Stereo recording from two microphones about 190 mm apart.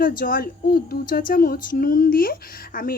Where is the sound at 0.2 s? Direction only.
50° left (ahead or behind).